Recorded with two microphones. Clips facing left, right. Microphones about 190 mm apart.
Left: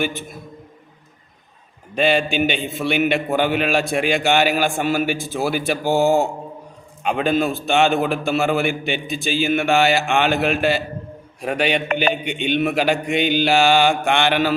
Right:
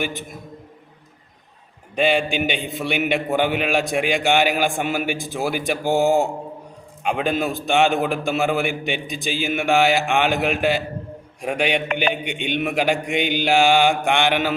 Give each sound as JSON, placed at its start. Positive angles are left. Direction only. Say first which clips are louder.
{"t": 0.0, "sound": "a man's voice", "louder": "left 3 dB", "side_deg": -15}
{"t": 2.0, "sound": "a man's voice", "louder": "left 1 dB", "side_deg": -15}